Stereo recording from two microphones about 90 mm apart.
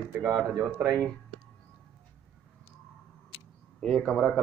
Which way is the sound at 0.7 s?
25° right (ahead or behind).